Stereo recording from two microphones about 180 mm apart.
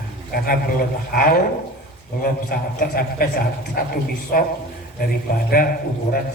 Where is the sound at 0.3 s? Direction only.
55° left (ahead or behind).